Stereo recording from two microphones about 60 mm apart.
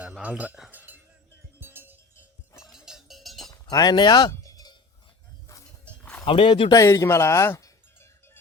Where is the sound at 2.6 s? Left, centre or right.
Centre.